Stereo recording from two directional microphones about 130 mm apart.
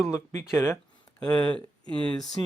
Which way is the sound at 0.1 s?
20° left (ahead or behind).